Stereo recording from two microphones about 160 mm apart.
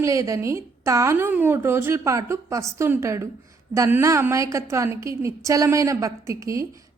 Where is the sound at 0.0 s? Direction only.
20° right (ahead or behind).